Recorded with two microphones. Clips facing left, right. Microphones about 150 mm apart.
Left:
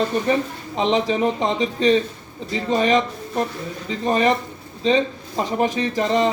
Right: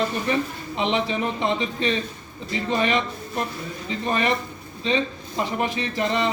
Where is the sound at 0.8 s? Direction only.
35° left (ahead or behind).